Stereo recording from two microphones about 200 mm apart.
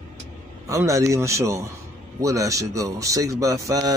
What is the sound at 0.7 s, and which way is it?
Speech, 15° right (ahead or behind).